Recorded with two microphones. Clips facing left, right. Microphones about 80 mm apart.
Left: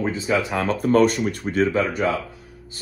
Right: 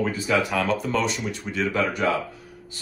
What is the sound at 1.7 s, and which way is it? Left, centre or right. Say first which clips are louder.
Speech: left 2 dB; left.